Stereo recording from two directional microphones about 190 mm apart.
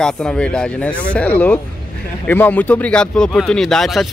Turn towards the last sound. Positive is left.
turn(degrees=0)  # may be behind; listen again after turning